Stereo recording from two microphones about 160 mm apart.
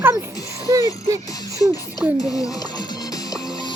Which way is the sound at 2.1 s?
20° left (ahead or behind).